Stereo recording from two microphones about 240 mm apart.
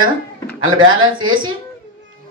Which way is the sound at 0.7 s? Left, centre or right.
Right.